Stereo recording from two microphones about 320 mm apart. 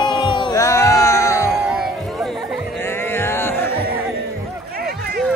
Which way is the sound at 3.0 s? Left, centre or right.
Centre.